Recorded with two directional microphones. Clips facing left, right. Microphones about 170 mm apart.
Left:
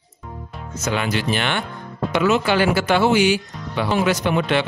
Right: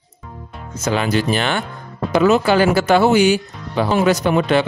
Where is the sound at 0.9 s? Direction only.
40° right (ahead or behind).